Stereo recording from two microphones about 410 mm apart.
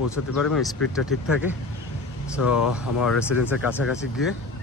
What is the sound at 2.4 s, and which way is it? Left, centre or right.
Speech, left.